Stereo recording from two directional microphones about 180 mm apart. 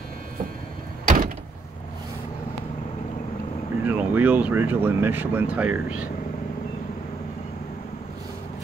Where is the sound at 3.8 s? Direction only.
10° right (ahead or behind).